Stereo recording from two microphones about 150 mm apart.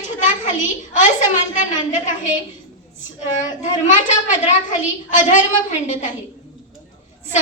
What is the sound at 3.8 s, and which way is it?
Speech, 55° left (ahead or behind).